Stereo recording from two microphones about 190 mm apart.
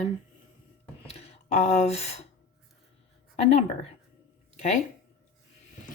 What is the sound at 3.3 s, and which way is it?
Speech, 35° left (ahead or behind).